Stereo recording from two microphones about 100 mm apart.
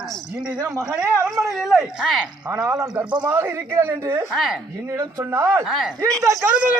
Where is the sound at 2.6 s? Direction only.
35° right (ahead or behind).